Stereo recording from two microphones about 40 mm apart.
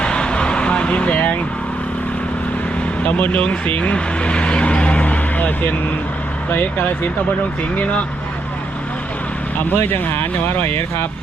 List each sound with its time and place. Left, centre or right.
0.0 s vehicle: left
3.0 s speech: left
9.6 s speech: left